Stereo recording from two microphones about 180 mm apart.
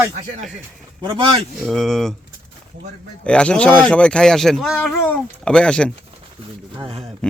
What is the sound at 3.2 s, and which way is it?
Speech, 5° left (ahead or behind).